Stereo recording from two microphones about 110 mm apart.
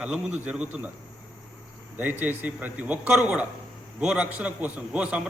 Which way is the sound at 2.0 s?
15° right (ahead or behind).